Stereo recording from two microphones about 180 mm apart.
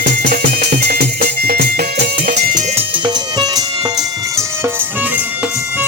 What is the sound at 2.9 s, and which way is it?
Music, 25° right (ahead or behind).